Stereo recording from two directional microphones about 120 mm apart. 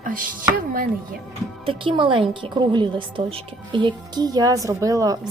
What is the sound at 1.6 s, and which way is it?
A woman's voice, 50° right (ahead or behind).